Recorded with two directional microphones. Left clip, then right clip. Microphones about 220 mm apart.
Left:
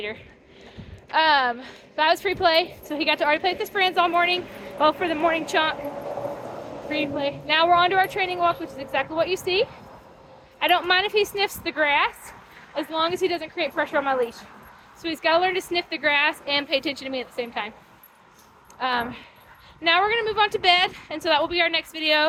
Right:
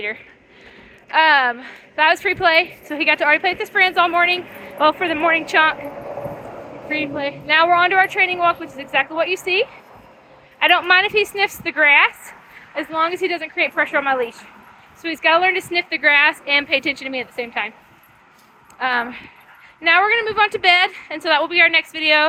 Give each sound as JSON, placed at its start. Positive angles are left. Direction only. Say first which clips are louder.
{"t": 1.1, "sound": "a woman's voice", "louder": "right 5 dB", "side_deg": -15}
{"t": 4.4, "sound": "speech", "louder": "right 2 dB", "side_deg": -35}
{"t": 4.8, "sound": "a woman's voice", "louder": "right 4 dB", "side_deg": -15}
{"t": 5.7, "sound": "a sound", "louder": "right 1 dB", "side_deg": -35}
{"t": 6.8, "sound": "a woman's voice", "louder": "right 3 dB", "side_deg": -15}
{"t": 12.7, "sound": "speech", "louder": "right 3 dB", "side_deg": -35}
{"t": 13.0, "sound": "a woman's voice", "louder": "right 4 dB", "side_deg": -10}
{"t": 18.8, "sound": "a woman's voice", "louder": "right 5 dB", "side_deg": -10}